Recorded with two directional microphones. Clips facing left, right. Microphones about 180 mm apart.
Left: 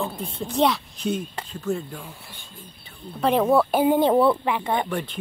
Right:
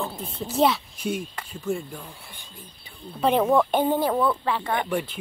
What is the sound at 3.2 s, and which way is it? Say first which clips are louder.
Speech: left 1 dB; centre (ahead or behind).